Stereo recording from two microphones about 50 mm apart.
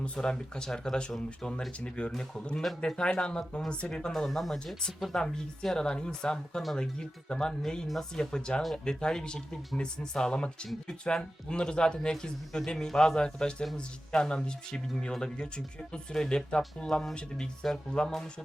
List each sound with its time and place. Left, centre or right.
0.0 s speech: centre
1.8 s speech: left
2.6 s speech: centre